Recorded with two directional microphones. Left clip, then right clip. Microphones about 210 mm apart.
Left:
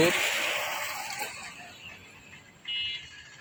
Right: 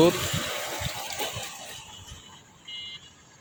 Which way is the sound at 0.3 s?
50° right (ahead or behind).